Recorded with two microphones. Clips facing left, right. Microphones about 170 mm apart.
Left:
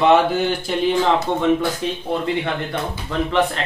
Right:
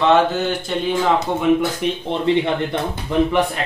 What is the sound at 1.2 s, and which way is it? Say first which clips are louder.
Speech: right 1 dB; 15° right (ahead or behind).